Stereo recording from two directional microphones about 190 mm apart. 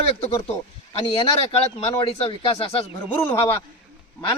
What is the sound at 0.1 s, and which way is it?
Speech, 30° left (ahead or behind).